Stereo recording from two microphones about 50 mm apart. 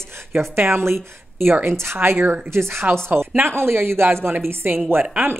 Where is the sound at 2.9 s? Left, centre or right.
Right.